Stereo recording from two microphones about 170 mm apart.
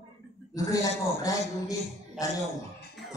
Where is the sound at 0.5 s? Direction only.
20° left (ahead or behind).